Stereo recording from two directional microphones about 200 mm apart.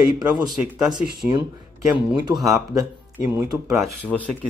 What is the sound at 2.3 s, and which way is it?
Speech, 15° right (ahead or behind).